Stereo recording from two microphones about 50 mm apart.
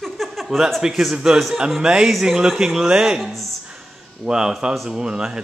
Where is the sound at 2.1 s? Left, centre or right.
Centre.